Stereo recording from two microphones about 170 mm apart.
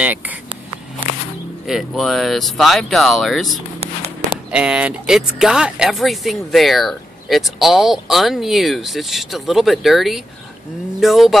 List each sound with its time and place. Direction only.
0.0 s speech: 10° right (ahead or behind)
1.7 s speech: centre (ahead or behind)
3.8 s a sound: 40° right (ahead or behind)
4.5 s speech: 5° right (ahead or behind)